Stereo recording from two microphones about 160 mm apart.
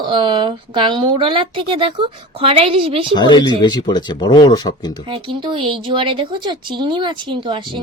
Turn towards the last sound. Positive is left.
turn(degrees=-30)  # may be behind; listen again after turning